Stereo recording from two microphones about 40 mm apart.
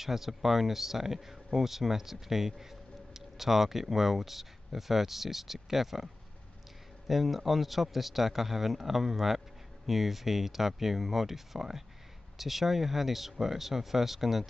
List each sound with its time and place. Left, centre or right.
0.0 s speech: centre
7.1 s a man's voice: centre